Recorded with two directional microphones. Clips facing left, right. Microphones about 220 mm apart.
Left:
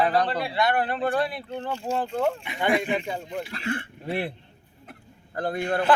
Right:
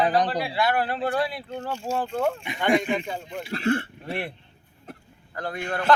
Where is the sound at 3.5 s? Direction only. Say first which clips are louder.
Right 10 dB; 35° right (ahead or behind).